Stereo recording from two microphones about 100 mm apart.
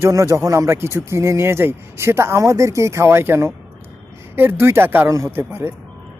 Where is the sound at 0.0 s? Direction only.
30° right (ahead or behind).